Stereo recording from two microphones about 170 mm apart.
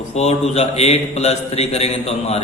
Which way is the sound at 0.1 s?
40° left (ahead or behind).